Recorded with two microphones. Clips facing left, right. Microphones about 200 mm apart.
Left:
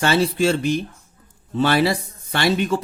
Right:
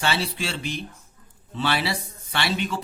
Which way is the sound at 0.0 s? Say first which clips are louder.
Left 9 dB; 45° left (ahead or behind).